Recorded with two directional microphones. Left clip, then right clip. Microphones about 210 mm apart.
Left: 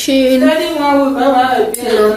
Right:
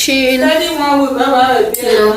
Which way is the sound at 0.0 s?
15° left (ahead or behind).